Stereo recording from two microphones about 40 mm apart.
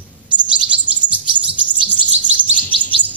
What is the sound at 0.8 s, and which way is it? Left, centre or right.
Chirp, right.